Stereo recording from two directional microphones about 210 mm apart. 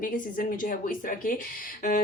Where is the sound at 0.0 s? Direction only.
40° left (ahead or behind).